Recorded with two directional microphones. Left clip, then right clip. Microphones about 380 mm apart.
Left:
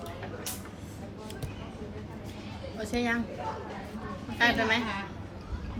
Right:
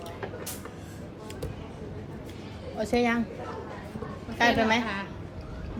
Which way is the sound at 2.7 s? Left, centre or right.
Centre.